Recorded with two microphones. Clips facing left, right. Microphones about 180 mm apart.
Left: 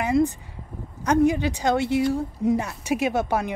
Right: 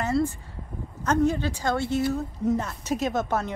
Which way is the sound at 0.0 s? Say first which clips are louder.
Left 4 dB; 15° left (ahead or behind).